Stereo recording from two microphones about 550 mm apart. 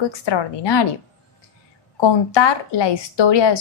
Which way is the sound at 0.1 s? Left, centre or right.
Left.